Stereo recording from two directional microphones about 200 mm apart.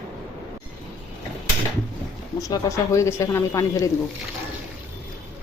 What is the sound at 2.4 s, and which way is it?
Speech, 15° left (ahead or behind).